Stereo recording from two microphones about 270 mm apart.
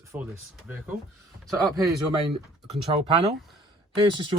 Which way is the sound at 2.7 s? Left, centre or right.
Right.